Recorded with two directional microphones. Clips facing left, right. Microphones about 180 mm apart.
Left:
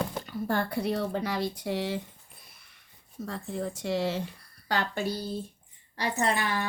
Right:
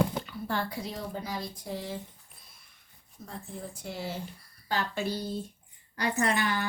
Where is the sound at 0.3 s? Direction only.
45° left (ahead or behind); by 2.0 s 85° left.